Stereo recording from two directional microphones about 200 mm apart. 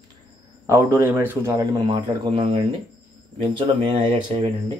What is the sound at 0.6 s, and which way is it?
A man's voice, 10° right (ahead or behind).